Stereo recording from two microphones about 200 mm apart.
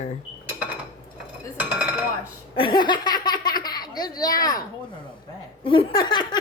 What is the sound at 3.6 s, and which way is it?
Speech, 20° left (ahead or behind).